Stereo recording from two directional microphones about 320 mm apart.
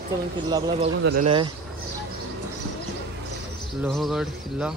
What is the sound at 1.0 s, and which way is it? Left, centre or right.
Speech, right.